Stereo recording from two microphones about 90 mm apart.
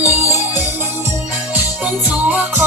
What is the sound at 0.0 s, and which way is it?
Music, 20° right (ahead or behind).